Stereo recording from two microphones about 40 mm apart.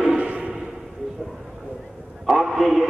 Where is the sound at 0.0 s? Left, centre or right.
Right.